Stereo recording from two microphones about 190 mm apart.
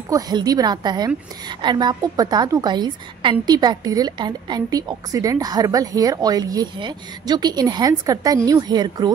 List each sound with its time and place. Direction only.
0.1 s a woman's voice: 20° right (ahead or behind)